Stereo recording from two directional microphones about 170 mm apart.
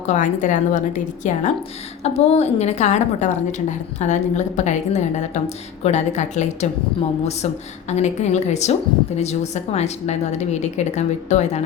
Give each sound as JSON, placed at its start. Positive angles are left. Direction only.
{"t": 0.1, "sound": "a woman's voice", "side_deg": 50}